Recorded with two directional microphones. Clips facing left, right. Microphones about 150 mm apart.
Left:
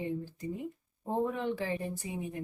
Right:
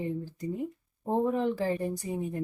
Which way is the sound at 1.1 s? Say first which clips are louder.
Right 5 dB; 35° right (ahead or behind).